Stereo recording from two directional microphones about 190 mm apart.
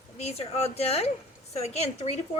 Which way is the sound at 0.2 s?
35° left (ahead or behind).